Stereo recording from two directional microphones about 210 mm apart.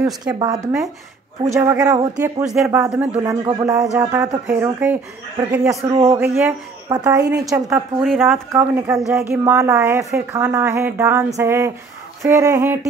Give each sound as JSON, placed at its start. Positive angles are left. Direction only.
{"t": 0.0, "sound": "speech", "side_deg": -15}
{"t": 2.4, "sound": "speech", "side_deg": 0}
{"t": 3.4, "sound": "speech", "side_deg": -15}
{"t": 5.9, "sound": "a man's voice", "side_deg": -25}
{"t": 6.1, "sound": "speech", "side_deg": -10}
{"t": 8.0, "sound": "speech", "side_deg": 0}